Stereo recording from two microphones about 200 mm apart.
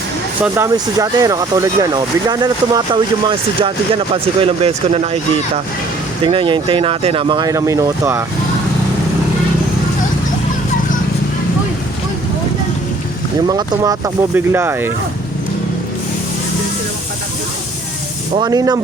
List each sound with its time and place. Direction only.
0.4 s speech: 15° right (ahead or behind); by 4.9 s 30° right (ahead or behind)
6.2 s speech: 25° right (ahead or behind)
13.5 s speech: 20° right (ahead or behind)
18.3 s speech: 20° right (ahead or behind)